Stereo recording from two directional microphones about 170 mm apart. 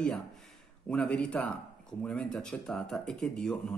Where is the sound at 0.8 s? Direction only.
5° left (ahead or behind).